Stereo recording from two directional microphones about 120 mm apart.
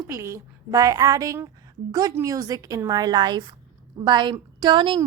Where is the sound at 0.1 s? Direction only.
25° right (ahead or behind).